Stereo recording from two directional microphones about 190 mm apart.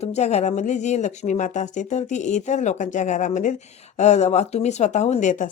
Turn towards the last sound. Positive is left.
turn(degrees=40)  # may be behind; listen again after turning